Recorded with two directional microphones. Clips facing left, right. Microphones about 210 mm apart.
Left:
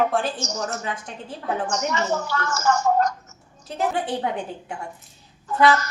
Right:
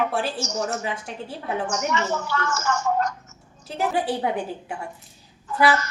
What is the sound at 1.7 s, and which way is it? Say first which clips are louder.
A woman's voice: left 1 dB; 40° left (ahead or behind).